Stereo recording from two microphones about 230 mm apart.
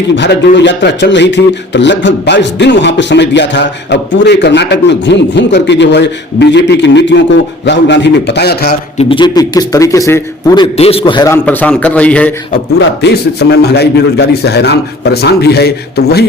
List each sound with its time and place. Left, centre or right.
0.2 s a man's voice: left
9.0 s a man's voice: left
11.4 s a man's voice: centre
13.0 s a man's voice: left